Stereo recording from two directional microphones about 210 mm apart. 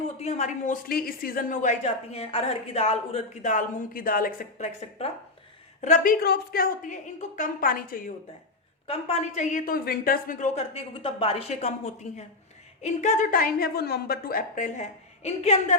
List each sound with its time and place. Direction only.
0.2 s a woman's voice: 30° left (ahead or behind)
8.9 s a woman's voice: 30° left (ahead or behind)